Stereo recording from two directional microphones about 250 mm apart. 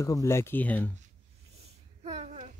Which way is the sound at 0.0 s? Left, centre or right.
Centre.